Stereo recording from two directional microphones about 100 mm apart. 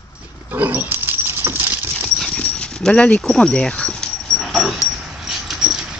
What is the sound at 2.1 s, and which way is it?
Dog, 5° left (ahead or behind).